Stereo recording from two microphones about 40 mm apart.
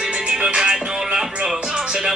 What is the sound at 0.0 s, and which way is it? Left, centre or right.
Music, right.